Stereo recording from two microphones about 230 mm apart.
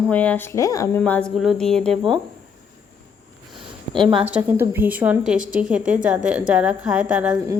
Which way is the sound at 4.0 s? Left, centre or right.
Right.